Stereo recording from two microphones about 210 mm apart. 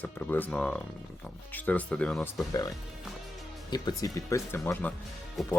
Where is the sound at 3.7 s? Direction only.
20° left (ahead or behind); by 5.5 s centre (ahead or behind).